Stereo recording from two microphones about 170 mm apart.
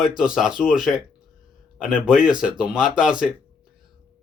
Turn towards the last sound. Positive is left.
turn(degrees=-5)  # may be behind; listen again after turning